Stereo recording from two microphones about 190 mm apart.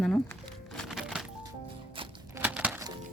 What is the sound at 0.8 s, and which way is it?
Music, centre (ahead or behind).